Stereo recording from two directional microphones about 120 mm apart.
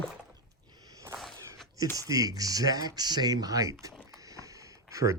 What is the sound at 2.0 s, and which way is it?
Speech, 30° right (ahead or behind).